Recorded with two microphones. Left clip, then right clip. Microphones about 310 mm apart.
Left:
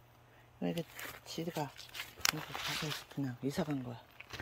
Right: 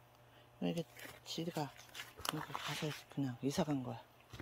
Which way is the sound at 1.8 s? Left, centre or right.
Centre.